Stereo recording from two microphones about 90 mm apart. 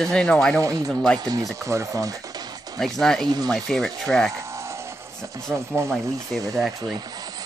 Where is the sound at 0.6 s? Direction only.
35° right (ahead or behind).